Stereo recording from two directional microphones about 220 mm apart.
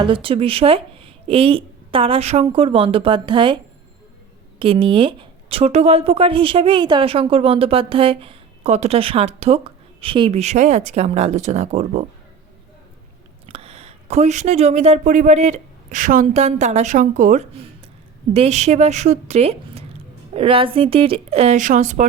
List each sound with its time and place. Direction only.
0.0 s speech: 25° right (ahead or behind)
4.6 s speech: 25° right (ahead or behind)
13.5 s speech: 25° right (ahead or behind)